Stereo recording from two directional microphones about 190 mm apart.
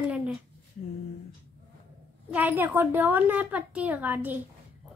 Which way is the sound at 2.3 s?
10° right (ahead or behind).